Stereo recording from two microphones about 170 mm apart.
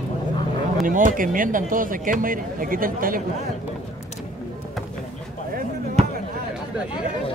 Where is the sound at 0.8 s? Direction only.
50° right (ahead or behind).